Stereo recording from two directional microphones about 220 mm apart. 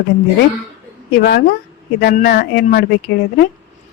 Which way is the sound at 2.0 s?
45° left (ahead or behind).